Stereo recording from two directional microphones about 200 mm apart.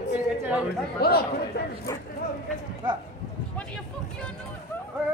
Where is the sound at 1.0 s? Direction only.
50° left (ahead or behind).